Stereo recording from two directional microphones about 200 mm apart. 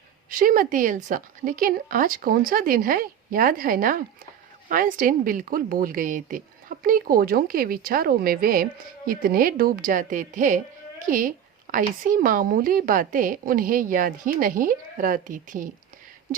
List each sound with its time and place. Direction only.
0.3 s a woman's voice: 45° right (ahead or behind)